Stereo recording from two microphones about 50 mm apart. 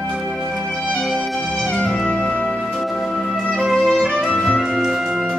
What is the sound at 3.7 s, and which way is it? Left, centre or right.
Music, centre.